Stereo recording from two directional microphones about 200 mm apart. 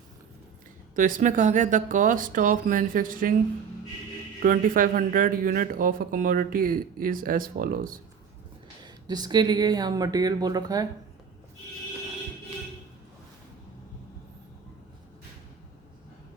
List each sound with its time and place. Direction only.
0.9 s speech: 40° right (ahead or behind)
4.4 s speech: 45° right (ahead or behind)
8.8 s speech: 20° right (ahead or behind)